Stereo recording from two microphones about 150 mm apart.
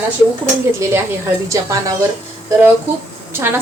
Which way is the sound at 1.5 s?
20° right (ahead or behind).